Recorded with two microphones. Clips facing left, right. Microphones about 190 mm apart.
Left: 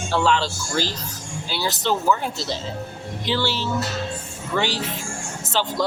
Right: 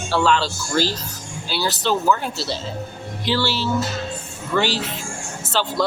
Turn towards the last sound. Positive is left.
turn(degrees=15)  # may be behind; listen again after turning